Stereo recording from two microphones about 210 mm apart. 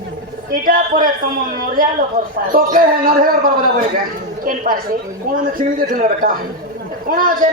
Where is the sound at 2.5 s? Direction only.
40° right (ahead or behind).